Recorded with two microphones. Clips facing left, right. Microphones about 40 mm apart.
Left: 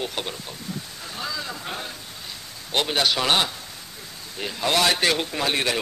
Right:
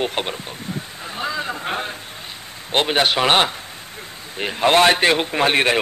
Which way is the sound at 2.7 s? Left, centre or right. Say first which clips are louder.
Right 5 dB; right.